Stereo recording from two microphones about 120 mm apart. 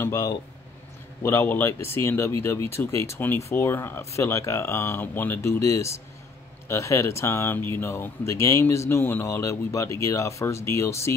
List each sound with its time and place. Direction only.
0.0 s speech: 25° left (ahead or behind)